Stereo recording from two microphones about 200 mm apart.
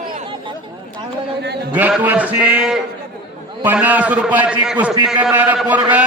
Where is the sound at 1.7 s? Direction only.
10° right (ahead or behind).